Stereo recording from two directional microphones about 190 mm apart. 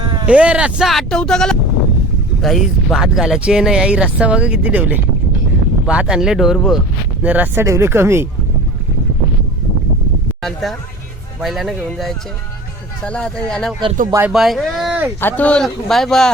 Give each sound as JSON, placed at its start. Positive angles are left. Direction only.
{"t": 0.0, "sound": "a sound", "side_deg": -25}
{"t": 0.3, "sound": "speech", "side_deg": -5}
{"t": 10.4, "sound": "speech", "side_deg": 0}
{"t": 14.1, "sound": "speech", "side_deg": -10}
{"t": 14.3, "sound": "speech", "side_deg": 0}